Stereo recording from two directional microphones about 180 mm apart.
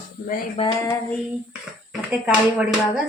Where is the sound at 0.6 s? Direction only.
20° left (ahead or behind).